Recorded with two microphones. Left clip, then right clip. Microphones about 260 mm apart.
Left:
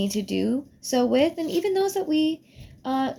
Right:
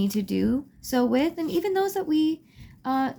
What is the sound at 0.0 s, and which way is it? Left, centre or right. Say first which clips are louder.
Speech: left 1 dB; right.